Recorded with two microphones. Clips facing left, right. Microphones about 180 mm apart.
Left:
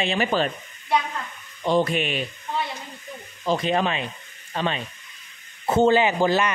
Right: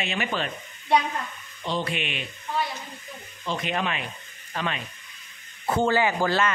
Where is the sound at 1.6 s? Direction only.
45° left (ahead or behind).